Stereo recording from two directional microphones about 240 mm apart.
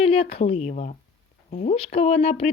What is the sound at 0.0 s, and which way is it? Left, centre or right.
Speech, left.